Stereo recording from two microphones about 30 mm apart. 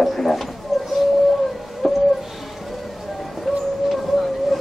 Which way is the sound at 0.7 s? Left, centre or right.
Centre.